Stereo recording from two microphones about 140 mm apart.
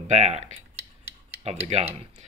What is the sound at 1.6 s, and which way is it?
Speech, 50° right (ahead or behind).